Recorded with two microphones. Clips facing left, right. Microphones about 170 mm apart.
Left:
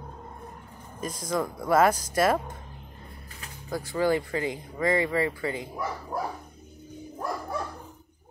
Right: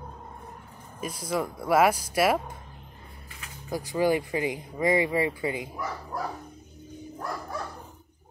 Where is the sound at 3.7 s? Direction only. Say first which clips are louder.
Right 1 dB; 15° right (ahead or behind).